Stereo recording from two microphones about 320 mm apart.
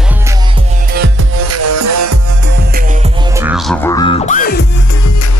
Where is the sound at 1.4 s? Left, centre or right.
Right.